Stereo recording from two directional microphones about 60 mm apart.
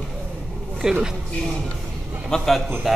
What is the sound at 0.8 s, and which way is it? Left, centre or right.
Speech, centre.